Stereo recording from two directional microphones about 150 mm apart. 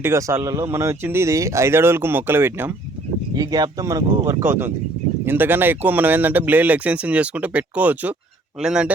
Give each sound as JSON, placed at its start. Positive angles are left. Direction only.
{"t": 0.0, "sound": "speech", "side_deg": -20}
{"t": 3.3, "sound": "speech", "side_deg": -25}